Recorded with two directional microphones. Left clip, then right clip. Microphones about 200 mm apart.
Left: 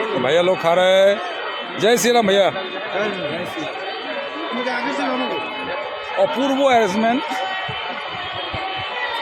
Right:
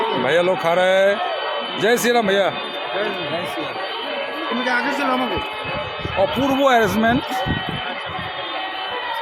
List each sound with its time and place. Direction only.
0.3 s speech: 10° left (ahead or behind)
6.4 s speech: centre (ahead or behind)